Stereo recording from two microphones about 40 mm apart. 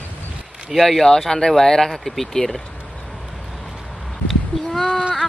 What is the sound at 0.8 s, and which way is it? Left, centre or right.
Speech, centre.